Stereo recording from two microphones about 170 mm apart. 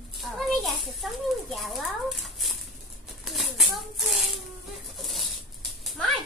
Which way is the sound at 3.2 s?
Centre (ahead or behind).